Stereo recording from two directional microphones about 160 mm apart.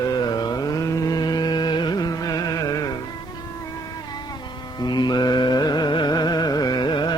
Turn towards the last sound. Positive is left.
turn(degrees=30)  # may be behind; listen again after turning